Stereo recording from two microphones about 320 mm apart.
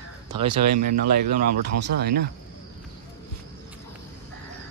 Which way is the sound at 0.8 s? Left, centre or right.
Right.